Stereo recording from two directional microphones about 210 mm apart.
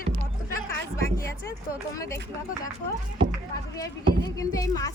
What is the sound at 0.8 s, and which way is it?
Speech, 15° left (ahead or behind).